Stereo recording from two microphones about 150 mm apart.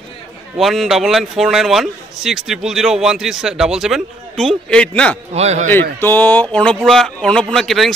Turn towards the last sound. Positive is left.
turn(degrees=0)  # may be behind; listen again after turning